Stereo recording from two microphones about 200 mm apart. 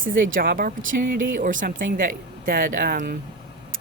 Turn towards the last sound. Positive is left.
turn(degrees=-45)  # may be behind; listen again after turning